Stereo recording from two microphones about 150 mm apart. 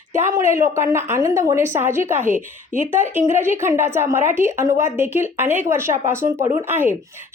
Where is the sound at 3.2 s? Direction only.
15° right (ahead or behind).